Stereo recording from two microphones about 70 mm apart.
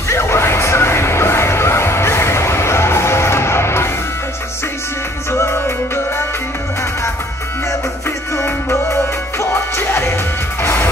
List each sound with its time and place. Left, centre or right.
0.1 s music: left
9.4 s music: left